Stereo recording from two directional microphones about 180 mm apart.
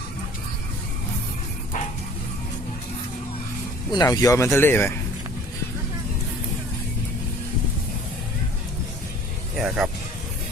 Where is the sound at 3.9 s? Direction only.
20° left (ahead or behind).